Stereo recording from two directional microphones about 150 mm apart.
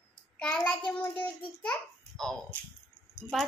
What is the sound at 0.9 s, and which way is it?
Speech, 10° left (ahead or behind).